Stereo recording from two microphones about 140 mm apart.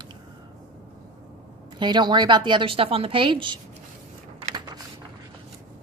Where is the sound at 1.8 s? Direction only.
30° right (ahead or behind).